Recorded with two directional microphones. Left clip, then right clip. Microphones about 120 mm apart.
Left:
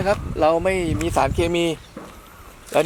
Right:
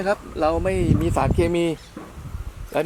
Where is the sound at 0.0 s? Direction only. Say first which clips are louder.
Left 3 dB; 20° left (ahead or behind).